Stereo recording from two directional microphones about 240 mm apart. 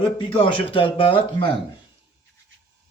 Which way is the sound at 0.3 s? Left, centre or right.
Left.